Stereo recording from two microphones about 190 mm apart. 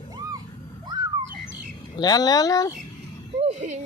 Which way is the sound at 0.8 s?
20° right (ahead or behind).